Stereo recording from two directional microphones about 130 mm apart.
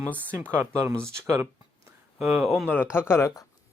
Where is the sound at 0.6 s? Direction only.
20° right (ahead or behind).